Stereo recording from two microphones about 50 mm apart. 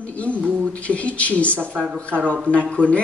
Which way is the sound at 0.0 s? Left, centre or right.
Left.